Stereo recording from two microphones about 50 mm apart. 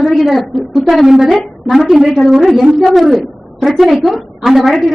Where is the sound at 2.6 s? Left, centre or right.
Centre.